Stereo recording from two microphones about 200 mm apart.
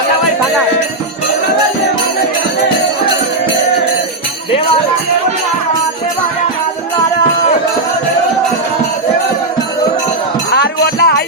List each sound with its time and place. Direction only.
10.5 s music: 55° left (ahead or behind)